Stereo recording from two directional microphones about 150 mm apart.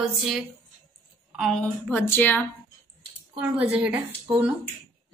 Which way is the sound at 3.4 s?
10° right (ahead or behind).